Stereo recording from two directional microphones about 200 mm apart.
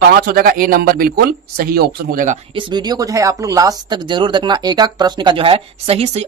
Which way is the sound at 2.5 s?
20° right (ahead or behind).